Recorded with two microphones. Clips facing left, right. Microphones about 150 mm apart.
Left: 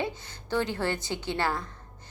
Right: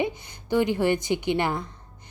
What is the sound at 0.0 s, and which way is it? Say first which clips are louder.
A woman's voice: right 5 dB; 15° right (ahead or behind).